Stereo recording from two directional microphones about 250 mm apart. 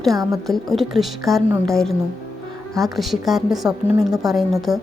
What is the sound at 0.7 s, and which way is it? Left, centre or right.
A woman's voice, centre.